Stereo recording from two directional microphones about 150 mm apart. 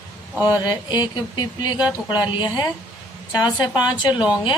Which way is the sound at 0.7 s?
30° left (ahead or behind).